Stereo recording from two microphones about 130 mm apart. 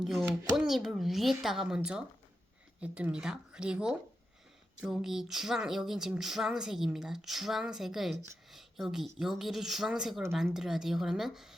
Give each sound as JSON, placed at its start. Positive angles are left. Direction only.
{"t": 0.0, "sound": "speech", "side_deg": 0}